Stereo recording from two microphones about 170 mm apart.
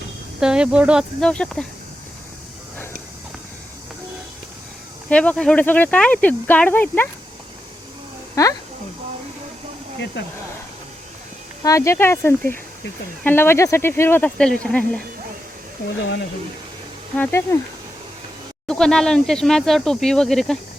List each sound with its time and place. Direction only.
0.3 s speech: 5° right (ahead or behind)
1.2 s speech: 5° left (ahead or behind)
5.0 s speech: 10° left (ahead or behind)
8.4 s speech: 20° left (ahead or behind)
10.2 s speech: 90° left
11.6 s speech: 20° left (ahead or behind)
17.2 s speech: 15° left (ahead or behind)
18.7 s speech: 5° left (ahead or behind)